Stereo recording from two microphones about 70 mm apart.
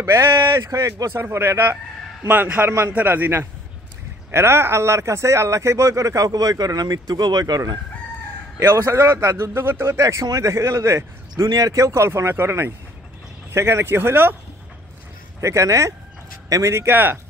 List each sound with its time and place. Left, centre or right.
0.0 s a man's voice: right
8.5 s speech: right
9.5 s speech: right
11.4 s speech: right
11.7 s speech: right
15.4 s speech: right
16.7 s speech: right